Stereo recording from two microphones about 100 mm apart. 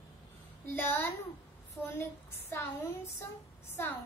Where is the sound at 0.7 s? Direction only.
25° left (ahead or behind).